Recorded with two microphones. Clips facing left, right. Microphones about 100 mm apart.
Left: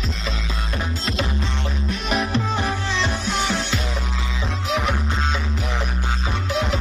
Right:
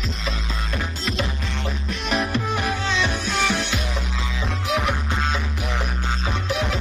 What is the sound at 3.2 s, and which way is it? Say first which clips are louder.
Music: even; 15° left (ahead or behind).